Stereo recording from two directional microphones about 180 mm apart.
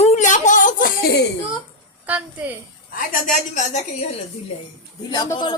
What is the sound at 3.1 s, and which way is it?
Speech, 45° left (ahead or behind).